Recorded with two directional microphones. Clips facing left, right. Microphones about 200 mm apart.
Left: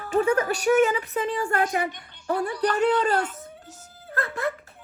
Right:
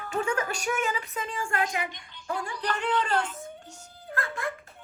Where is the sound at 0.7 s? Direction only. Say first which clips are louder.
Left 10 dB; 30° left (ahead or behind).